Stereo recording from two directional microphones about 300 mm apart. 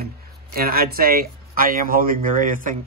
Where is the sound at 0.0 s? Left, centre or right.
Right.